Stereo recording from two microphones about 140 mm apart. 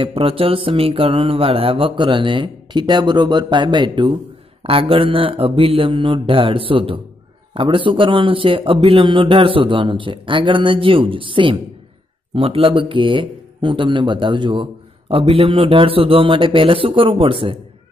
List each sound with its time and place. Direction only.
0.0 s speech: 40° right (ahead or behind)